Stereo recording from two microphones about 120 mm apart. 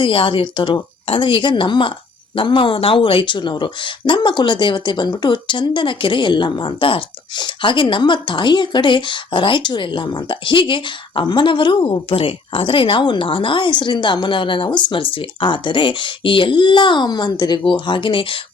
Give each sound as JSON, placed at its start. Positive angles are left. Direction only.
{"t": 0.0, "sound": "speech", "side_deg": 45}